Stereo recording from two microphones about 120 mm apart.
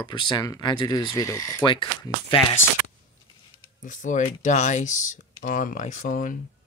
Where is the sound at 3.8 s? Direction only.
90° left.